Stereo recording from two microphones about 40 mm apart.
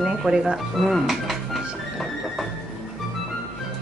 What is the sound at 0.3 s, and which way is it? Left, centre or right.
Speech, centre.